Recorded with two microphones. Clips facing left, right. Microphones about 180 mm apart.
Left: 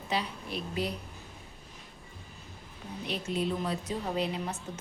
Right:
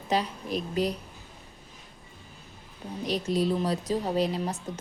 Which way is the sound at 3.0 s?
40° right (ahead or behind).